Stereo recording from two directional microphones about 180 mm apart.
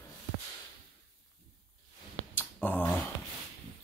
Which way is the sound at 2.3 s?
10° left (ahead or behind).